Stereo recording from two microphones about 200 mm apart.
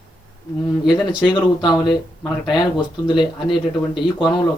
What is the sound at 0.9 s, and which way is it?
Speech, 20° left (ahead or behind).